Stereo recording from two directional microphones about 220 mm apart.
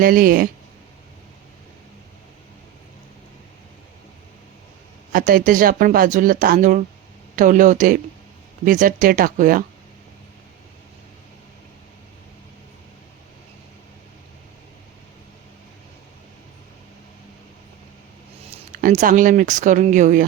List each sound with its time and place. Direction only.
0.0 s speech: 40° right (ahead or behind)
5.1 s speech: 40° right (ahead or behind)
18.8 s speech: 35° right (ahead or behind)